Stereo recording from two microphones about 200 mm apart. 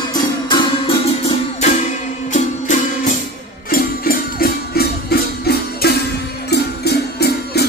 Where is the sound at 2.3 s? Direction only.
35° left (ahead or behind); by 7.6 s 55° left (ahead or behind).